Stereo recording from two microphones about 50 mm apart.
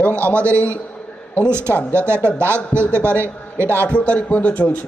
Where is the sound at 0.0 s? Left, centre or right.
Right.